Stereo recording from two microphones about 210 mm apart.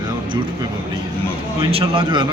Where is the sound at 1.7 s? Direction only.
25° right (ahead or behind).